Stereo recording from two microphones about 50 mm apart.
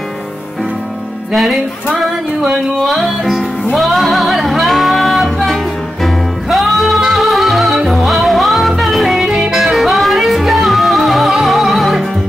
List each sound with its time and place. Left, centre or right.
1.3 s music: centre
9.3 s music: centre
9.6 s music: centre